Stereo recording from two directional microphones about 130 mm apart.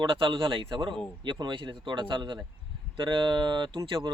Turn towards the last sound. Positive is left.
turn(degrees=-40)  # may be behind; listen again after turning